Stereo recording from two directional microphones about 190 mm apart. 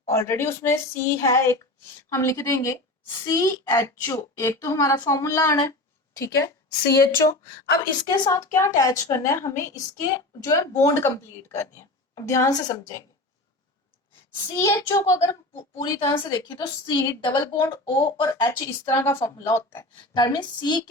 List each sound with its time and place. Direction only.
0.0 s a woman's voice: 15° left (ahead or behind)
7.9 s a woman's voice: 25° left (ahead or behind)
14.5 s a woman's voice: 15° left (ahead or behind)